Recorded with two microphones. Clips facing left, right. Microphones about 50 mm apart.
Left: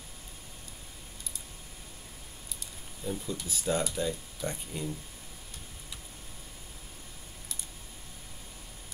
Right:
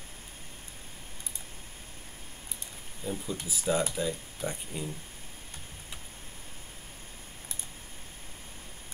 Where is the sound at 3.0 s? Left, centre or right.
Right.